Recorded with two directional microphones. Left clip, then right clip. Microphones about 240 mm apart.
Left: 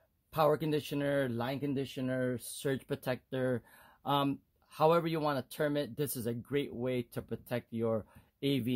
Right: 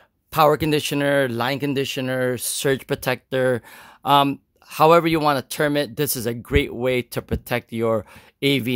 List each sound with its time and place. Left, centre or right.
0.3 s speech: right